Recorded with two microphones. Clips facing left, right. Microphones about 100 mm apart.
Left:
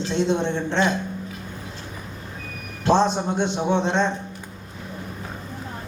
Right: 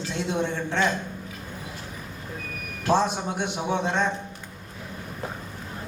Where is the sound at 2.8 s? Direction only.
25° left (ahead or behind).